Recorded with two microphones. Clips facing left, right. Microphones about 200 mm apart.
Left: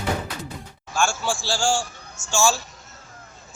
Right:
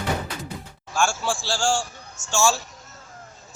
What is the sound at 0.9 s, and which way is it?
A man's voice, 5° right (ahead or behind).